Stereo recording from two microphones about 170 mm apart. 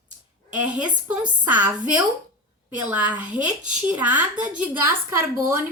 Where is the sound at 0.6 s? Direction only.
10° right (ahead or behind).